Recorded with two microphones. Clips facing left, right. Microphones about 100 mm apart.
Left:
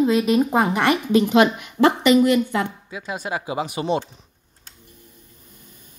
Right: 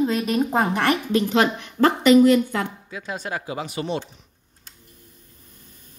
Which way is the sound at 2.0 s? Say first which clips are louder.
Right 2 dB; 5° left (ahead or behind).